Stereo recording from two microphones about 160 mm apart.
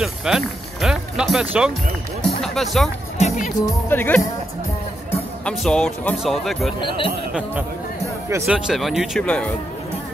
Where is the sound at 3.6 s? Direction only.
10° left (ahead or behind).